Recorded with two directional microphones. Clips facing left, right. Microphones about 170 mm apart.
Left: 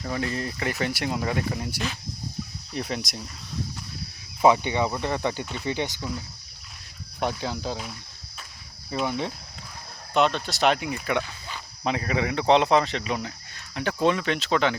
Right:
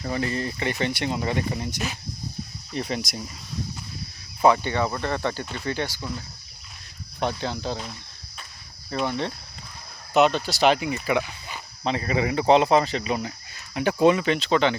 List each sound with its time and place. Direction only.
0.0 s speech: centre (ahead or behind)
4.4 s speech: 15° left (ahead or behind)
7.2 s speech: 10° left (ahead or behind)
10.2 s speech: 5° right (ahead or behind)
11.4 s a sound: 10° right (ahead or behind)
11.9 s speech: centre (ahead or behind)